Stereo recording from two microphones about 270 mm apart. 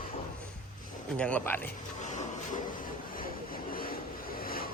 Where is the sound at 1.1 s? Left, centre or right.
Centre.